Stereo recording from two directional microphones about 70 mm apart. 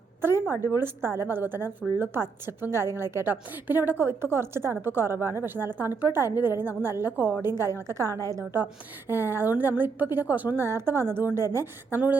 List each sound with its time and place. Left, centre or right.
0.2 s a sound: right
0.5 s a woman's voice: left
0.8 s a woman's voice: right
3.2 s a woman's voice: right
9.0 s a woman's voice: right